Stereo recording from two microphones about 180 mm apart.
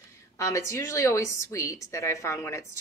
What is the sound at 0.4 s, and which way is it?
A woman's voice, 15° left (ahead or behind).